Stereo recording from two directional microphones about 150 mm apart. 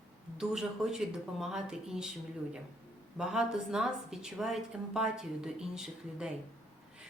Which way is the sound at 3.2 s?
5° right (ahead or behind).